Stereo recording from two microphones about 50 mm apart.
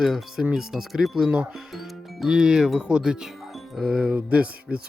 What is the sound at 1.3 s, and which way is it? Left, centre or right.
Speech, right.